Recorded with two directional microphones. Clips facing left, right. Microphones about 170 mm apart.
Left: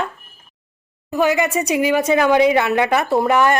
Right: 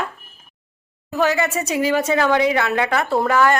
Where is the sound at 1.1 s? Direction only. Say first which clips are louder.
Left 2 dB; 15° left (ahead or behind).